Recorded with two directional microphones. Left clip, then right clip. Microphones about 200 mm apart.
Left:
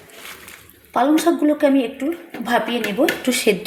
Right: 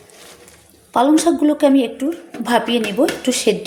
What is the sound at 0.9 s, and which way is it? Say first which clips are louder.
A woman's voice: right 2 dB; 15° right (ahead or behind).